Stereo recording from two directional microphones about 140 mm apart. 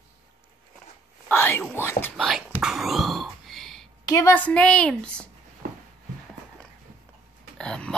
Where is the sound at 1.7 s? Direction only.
15° left (ahead or behind).